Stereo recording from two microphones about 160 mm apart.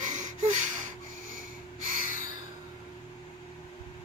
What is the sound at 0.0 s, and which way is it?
Gasp, 50° right (ahead or behind).